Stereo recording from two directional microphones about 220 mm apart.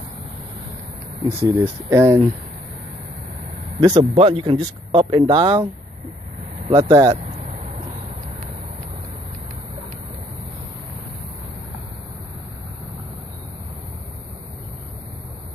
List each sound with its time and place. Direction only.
1.4 s speech: 10° right (ahead or behind)
3.8 s speech: 15° right (ahead or behind)